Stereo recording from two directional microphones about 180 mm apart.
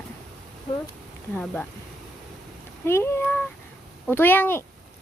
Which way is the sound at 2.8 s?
15° left (ahead or behind).